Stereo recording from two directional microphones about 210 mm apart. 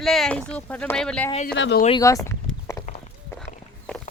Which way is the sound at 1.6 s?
55° left (ahead or behind).